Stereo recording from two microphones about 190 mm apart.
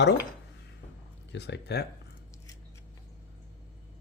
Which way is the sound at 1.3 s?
60° left (ahead or behind).